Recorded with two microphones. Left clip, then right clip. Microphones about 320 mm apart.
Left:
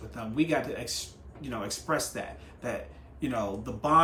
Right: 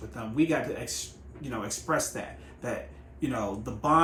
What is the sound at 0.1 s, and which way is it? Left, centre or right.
Speech, centre.